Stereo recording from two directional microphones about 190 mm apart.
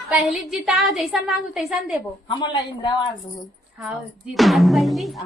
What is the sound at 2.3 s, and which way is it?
Speech, 25° left (ahead or behind).